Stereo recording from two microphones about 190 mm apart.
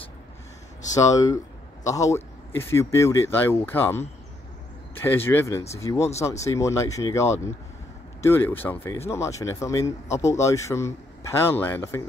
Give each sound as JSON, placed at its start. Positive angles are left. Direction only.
{"t": 0.9, "sound": "a man's voice", "side_deg": 20}